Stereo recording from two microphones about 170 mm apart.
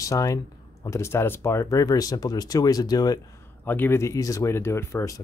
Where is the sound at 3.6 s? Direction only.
10° left (ahead or behind).